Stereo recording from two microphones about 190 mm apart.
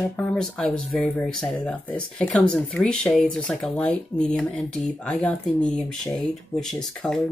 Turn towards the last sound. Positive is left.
turn(degrees=5)  # may be behind; listen again after turning